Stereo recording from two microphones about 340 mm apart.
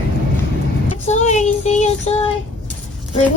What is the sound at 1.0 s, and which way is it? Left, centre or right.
Child singing, left.